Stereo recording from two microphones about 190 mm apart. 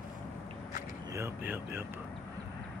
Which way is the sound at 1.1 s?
10° right (ahead or behind).